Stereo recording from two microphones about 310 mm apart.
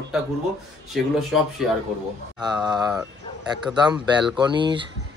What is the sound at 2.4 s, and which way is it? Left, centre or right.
Speech, centre.